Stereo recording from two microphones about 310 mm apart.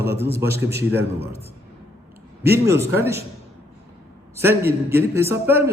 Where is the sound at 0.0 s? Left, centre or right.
Centre.